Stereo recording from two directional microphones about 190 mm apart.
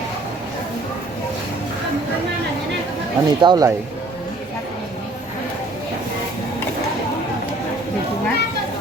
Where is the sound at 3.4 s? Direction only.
20° right (ahead or behind).